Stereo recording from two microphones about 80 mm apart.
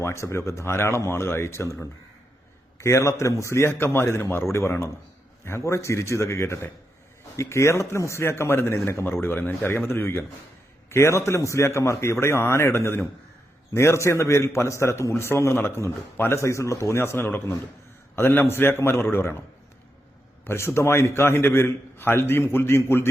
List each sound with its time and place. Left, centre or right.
0.0 s a man's voice: left
20.4 s a man's voice: left